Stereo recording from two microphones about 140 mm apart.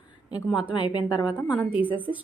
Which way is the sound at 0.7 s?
35° left (ahead or behind).